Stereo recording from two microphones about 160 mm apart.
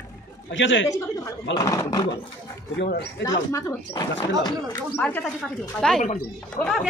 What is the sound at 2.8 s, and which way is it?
Speech, 90° left.